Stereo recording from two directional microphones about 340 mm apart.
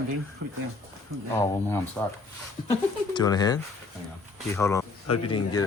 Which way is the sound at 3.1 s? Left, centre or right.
Centre.